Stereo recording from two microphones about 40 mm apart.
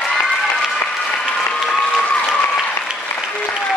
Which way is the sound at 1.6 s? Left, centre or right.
Left.